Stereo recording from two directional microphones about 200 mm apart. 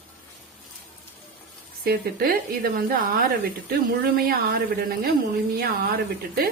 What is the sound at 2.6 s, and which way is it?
Speech, 50° right (ahead or behind).